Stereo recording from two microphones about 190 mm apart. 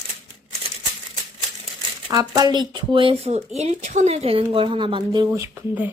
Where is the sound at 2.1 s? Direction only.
20° right (ahead or behind).